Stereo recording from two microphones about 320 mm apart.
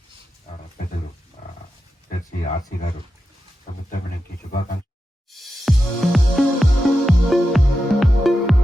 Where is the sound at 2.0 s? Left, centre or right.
Left.